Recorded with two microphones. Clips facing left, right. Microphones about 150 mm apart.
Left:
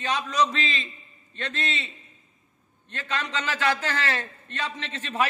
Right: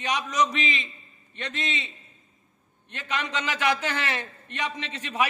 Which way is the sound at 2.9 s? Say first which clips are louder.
Even; 15° right (ahead or behind).